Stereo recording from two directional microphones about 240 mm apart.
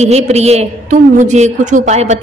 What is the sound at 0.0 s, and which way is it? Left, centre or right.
A woman's voice, right.